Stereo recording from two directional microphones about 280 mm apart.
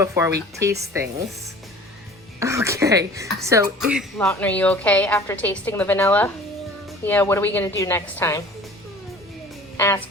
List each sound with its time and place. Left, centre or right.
0.0 s speech: centre
2.4 s a woman's voice: centre
9.7 s speech: centre